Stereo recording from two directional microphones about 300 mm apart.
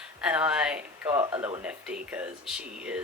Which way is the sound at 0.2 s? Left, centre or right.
Centre.